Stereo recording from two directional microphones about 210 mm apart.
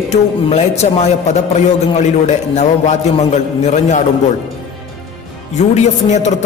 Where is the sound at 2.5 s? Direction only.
35° left (ahead or behind).